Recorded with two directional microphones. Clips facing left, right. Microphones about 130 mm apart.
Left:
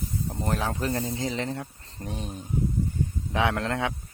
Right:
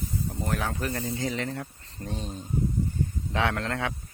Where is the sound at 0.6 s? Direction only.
25° left (ahead or behind).